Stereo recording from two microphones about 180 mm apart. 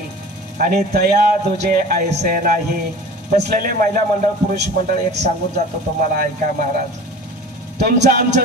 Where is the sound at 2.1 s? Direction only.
45° right (ahead or behind).